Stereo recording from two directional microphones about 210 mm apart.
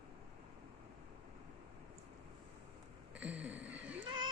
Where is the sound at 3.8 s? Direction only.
60° right (ahead or behind).